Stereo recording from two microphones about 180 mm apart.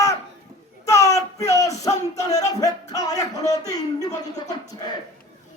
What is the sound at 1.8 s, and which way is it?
Speech, 20° left (ahead or behind).